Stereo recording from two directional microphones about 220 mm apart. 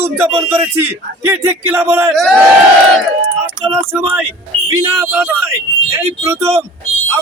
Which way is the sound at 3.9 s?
10° right (ahead or behind).